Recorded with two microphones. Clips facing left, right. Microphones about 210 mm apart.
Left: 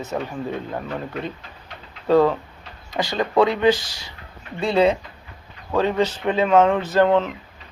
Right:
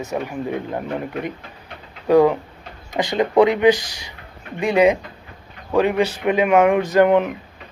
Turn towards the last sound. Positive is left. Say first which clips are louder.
# right 3 dB
turn(degrees=-15)  # may be behind; listen again after turning